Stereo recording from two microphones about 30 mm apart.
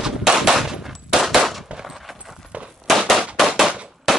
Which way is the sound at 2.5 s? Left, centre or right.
Right.